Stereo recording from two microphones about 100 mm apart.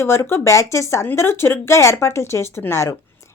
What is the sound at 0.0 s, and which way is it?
A woman's voice, 25° left (ahead or behind).